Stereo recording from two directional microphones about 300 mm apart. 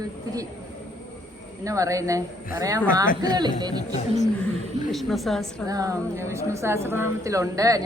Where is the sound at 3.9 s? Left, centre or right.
Left.